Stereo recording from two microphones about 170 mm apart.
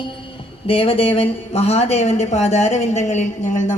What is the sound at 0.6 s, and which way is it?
Speech, 35° left (ahead or behind).